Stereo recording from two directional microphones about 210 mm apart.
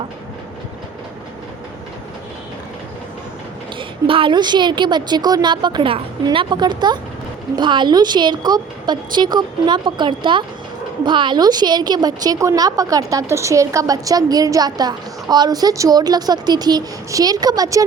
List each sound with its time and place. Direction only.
3.8 s a woman's voice: 25° right (ahead or behind)